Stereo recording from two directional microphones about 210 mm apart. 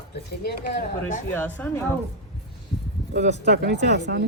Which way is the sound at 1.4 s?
10° left (ahead or behind).